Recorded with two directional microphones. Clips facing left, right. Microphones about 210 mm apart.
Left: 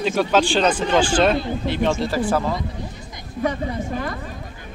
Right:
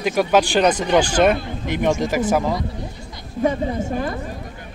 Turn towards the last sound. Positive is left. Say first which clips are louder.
# right 3 dB
turn(degrees=-25)  # may be behind; listen again after turning